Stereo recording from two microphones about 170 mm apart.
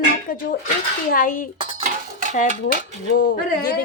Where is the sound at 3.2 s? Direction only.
60° left (ahead or behind).